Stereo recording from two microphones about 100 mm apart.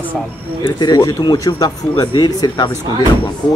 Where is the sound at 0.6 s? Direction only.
45° left (ahead or behind).